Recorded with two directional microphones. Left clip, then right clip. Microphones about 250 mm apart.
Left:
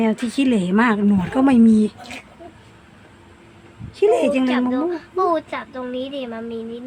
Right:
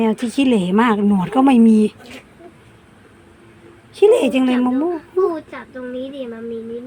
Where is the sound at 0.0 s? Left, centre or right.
Centre.